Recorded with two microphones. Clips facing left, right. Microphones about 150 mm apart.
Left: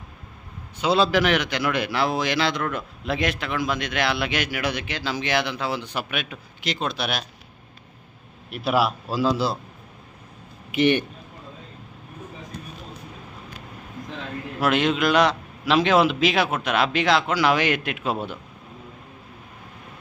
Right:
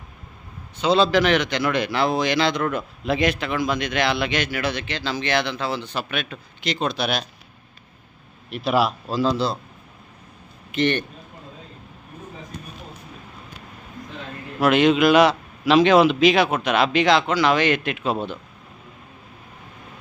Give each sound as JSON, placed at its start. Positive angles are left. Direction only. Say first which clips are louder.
{"t": 0.8, "sound": "a man's voice", "louder": "right 2 dB", "side_deg": 5}
{"t": 8.4, "sound": "a man's voice", "louder": "right 1 dB", "side_deg": 5}
{"t": 10.7, "sound": "a man's voice", "louder": "left 2 dB", "side_deg": 10}
{"t": 14.6, "sound": "a man's voice", "louder": "right 5 dB", "side_deg": 0}